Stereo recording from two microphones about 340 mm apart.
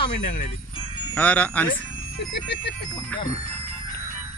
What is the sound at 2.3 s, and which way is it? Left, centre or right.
Speech, left.